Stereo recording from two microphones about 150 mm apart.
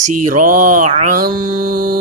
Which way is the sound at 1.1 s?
75° right (ahead or behind).